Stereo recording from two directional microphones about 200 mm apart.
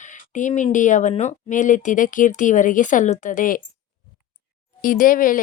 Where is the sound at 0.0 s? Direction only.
40° left (ahead or behind).